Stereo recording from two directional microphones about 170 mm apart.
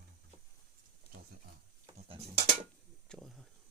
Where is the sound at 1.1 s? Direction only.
35° left (ahead or behind).